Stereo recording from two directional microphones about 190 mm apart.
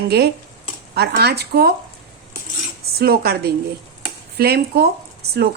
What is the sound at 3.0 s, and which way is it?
Speech, 55° right (ahead or behind).